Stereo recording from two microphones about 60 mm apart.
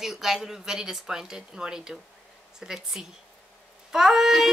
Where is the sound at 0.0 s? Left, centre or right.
Centre.